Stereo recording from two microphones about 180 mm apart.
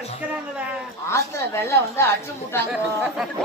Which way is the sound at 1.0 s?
15° left (ahead or behind).